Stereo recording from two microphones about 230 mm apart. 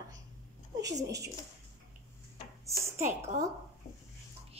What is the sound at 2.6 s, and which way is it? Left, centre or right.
Speech, centre.